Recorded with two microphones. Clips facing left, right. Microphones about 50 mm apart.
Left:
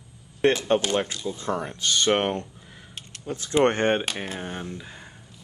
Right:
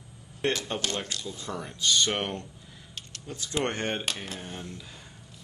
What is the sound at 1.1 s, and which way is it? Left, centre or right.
Speech, centre.